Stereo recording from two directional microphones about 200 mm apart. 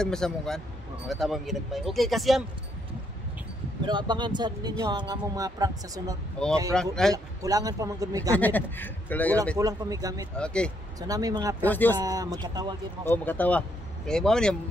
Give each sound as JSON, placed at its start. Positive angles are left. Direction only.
{"t": 0.0, "sound": "speech", "side_deg": 5}
{"t": 3.8, "sound": "speech", "side_deg": -20}
{"t": 6.4, "sound": "speech", "side_deg": 5}
{"t": 7.4, "sound": "speech", "side_deg": -15}
{"t": 8.4, "sound": "speech", "side_deg": 10}
{"t": 9.6, "sound": "speech", "side_deg": -15}
{"t": 10.3, "sound": "speech", "side_deg": 5}
{"t": 11.0, "sound": "speech", "side_deg": -20}
{"t": 11.6, "sound": "speech", "side_deg": 10}
{"t": 12.0, "sound": "speech", "side_deg": -20}
{"t": 13.0, "sound": "speech", "side_deg": 10}